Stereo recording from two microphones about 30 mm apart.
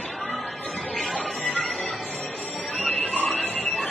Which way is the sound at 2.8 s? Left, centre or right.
Left.